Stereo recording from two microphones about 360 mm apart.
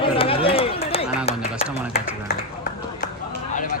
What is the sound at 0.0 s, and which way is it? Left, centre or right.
Run, centre.